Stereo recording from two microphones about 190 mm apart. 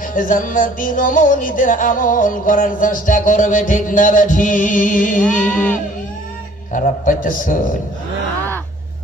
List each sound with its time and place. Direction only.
0.1 s music: 45° left (ahead or behind)
5.5 s music: 10° left (ahead or behind)
6.7 s music: 45° left (ahead or behind)